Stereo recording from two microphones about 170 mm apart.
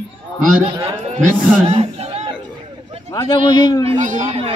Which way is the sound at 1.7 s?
35° right (ahead or behind).